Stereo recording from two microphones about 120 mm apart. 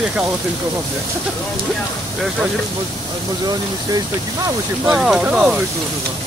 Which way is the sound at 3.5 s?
30° right (ahead or behind).